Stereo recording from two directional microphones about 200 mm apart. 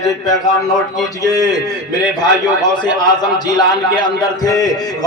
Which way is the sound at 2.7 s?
20° left (ahead or behind).